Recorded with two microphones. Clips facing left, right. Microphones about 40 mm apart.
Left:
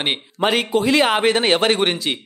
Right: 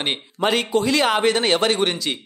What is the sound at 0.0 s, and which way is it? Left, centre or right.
Speech, centre.